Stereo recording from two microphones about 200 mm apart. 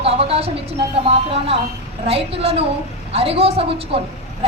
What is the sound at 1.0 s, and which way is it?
A woman's voice, 30° right (ahead or behind).